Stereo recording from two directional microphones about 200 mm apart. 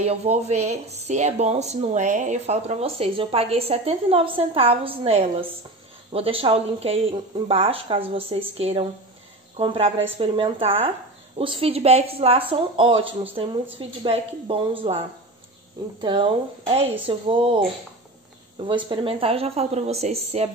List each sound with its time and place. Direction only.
0.0 s a woman's voice: 30° right (ahead or behind)
16.0 s a woman's voice: 25° right (ahead or behind)